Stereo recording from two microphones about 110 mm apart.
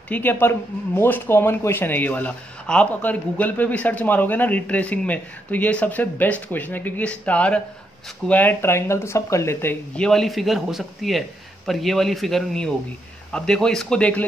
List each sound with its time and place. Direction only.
0.1 s speech: 20° left (ahead or behind)
9.9 s a man's voice: 5° left (ahead or behind)